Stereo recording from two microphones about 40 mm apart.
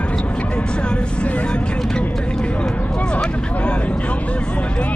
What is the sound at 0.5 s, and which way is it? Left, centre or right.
Vehicle, left.